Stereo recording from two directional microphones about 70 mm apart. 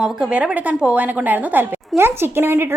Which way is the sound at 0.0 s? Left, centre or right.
Centre.